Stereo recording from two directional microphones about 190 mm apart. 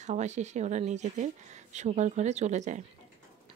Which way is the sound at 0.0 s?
40° right (ahead or behind).